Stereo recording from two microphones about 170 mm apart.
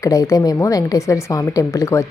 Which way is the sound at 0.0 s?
20° left (ahead or behind).